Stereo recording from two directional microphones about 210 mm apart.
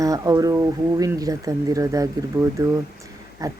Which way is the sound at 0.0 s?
15° right (ahead or behind).